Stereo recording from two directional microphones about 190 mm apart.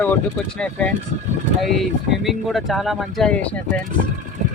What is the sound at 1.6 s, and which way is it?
Speech, centre (ahead or behind).